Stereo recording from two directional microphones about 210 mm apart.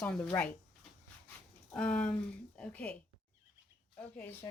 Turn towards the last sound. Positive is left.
turn(degrees=10)  # may be behind; listen again after turning